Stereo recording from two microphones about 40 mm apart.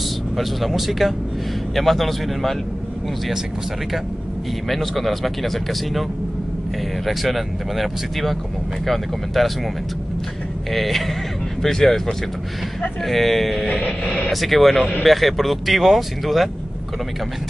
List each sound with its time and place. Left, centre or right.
0.4 s speech: centre
4.6 s speech: centre
7.1 s speech: centre
10.7 s speech: centre
13.7 s music: left
14.3 s speech: centre